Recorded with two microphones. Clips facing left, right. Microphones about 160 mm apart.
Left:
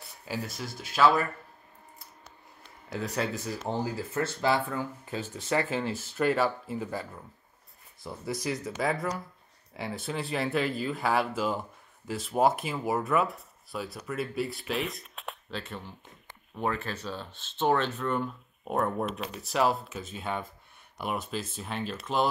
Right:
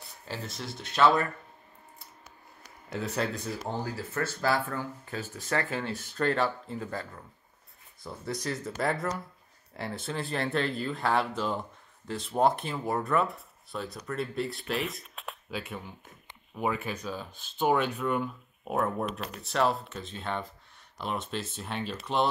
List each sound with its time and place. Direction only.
0.0 s a sound: 5° left (ahead or behind)
0.7 s speech: centre (ahead or behind)
2.9 s speech: centre (ahead or behind)
3.6 s speech: 20° left (ahead or behind)
5.9 s speech: 5° left (ahead or behind)
8.0 s speech: centre (ahead or behind)